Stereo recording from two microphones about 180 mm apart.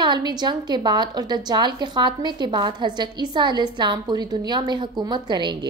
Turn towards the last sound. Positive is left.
turn(degrees=-25)  # may be behind; listen again after turning